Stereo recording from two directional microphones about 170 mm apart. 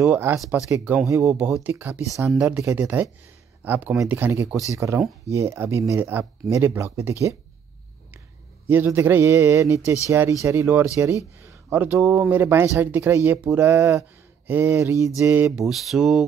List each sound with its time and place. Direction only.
0.0 s speech: 10° right (ahead or behind)
8.6 s speech: 10° right (ahead or behind)
15.5 s mantra: centre (ahead or behind)